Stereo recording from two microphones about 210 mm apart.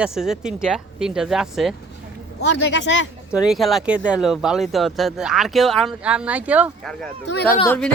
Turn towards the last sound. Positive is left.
turn(degrees=10)  # may be behind; listen again after turning